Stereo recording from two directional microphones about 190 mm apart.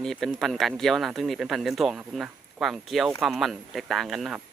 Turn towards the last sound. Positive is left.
turn(degrees=0)  # may be behind; listen again after turning